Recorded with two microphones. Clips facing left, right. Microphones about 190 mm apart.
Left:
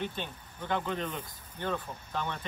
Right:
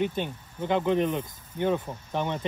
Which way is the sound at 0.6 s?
20° right (ahead or behind).